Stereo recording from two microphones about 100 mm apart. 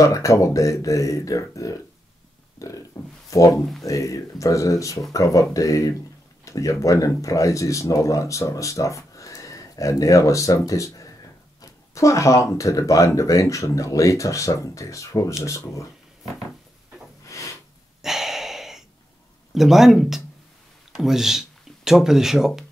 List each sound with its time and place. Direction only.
0.0 s speech: 30° left (ahead or behind)
2.9 s speech: 40° left (ahead or behind)
3.5 s speech: centre (ahead or behind)
3.8 s speech: 30° left (ahead or behind)
17.3 s a sound: 30° left (ahead or behind)
18.0 s a sound: 5° right (ahead or behind)
19.5 s speech: 5° right (ahead or behind)